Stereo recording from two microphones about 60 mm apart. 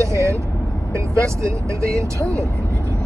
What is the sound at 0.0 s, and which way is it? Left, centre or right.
Vehicle, right.